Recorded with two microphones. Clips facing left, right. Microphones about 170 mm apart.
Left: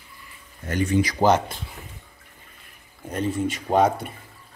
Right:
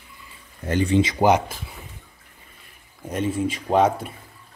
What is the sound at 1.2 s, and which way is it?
Speech, 10° right (ahead or behind).